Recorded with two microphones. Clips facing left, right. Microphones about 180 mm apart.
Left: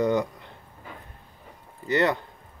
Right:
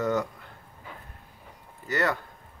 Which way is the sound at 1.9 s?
20° left (ahead or behind).